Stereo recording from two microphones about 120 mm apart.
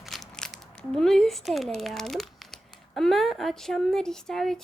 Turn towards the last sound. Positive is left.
turn(degrees=5)  # may be behind; listen again after turning